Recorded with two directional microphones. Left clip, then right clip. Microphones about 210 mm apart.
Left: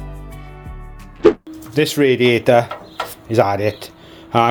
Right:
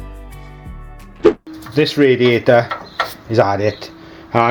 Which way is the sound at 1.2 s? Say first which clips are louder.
Even; centre (ahead or behind).